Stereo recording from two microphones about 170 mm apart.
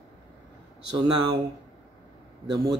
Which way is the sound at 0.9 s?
25° right (ahead or behind).